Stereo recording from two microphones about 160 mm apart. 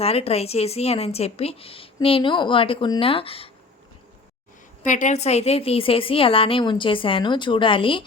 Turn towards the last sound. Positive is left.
turn(degrees=35)  # may be behind; listen again after turning